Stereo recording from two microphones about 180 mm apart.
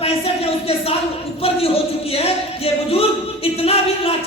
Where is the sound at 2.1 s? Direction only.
35° left (ahead or behind).